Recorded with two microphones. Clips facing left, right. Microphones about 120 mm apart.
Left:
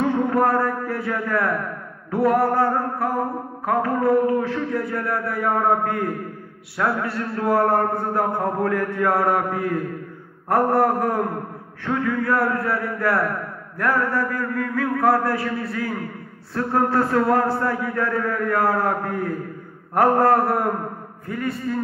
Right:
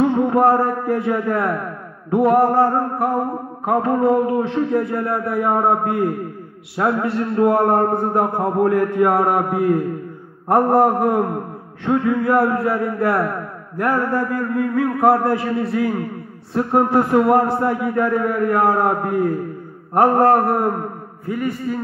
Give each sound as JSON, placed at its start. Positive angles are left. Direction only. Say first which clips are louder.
{"t": 0.1, "sound": "a man's voice", "louder": "right 4 dB", "side_deg": -20}